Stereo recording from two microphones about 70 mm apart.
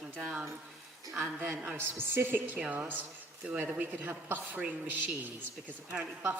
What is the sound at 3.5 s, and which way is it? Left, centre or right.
A woman's voice, centre.